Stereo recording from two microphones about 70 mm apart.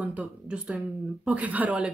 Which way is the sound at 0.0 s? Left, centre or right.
Centre.